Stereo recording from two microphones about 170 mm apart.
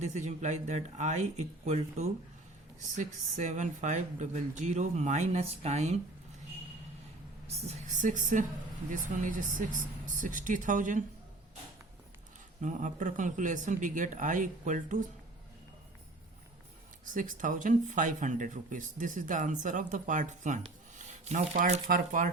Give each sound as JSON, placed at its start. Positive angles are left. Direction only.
{"t": 0.0, "sound": "speech", "side_deg": -40}
{"t": 7.4, "sound": "speech", "side_deg": -45}
{"t": 12.6, "sound": "speech", "side_deg": -50}
{"t": 17.2, "sound": "speech", "side_deg": -50}